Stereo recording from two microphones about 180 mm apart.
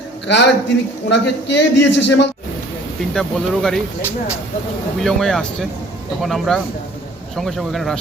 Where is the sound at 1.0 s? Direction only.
75° left (ahead or behind).